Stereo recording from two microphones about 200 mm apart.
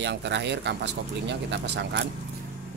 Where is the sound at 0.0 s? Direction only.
60° right (ahead or behind).